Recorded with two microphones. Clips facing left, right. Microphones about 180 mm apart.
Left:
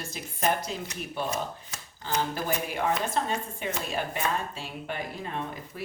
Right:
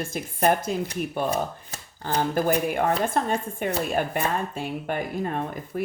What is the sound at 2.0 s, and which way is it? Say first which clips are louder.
Speech: right 6 dB; 55° right (ahead or behind).